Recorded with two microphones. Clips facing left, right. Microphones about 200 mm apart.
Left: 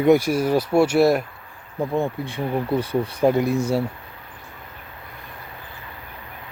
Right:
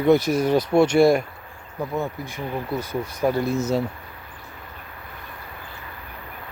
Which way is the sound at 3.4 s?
15° left (ahead or behind).